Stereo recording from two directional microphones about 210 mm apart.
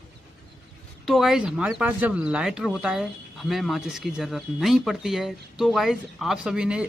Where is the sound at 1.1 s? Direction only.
Centre (ahead or behind).